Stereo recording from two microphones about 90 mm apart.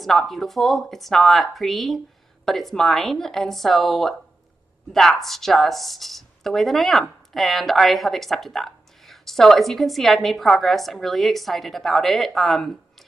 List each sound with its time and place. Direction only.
0.0 s speech: centre (ahead or behind)